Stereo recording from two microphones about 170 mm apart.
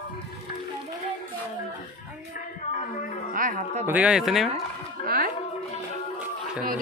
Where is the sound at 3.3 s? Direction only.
50° right (ahead or behind).